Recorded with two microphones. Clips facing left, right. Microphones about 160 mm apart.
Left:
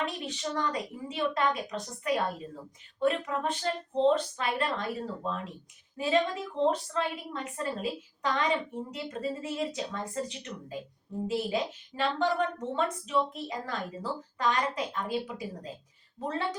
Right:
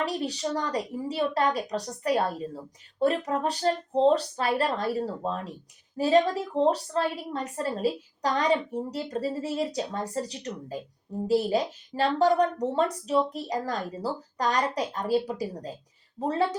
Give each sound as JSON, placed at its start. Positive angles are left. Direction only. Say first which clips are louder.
{"t": 0.0, "sound": "a woman's voice", "louder": "right 5 dB", "side_deg": -35}